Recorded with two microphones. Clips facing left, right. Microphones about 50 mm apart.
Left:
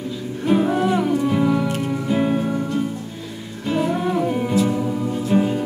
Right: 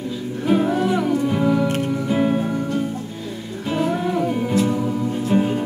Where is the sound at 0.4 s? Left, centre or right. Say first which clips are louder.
Even; centre.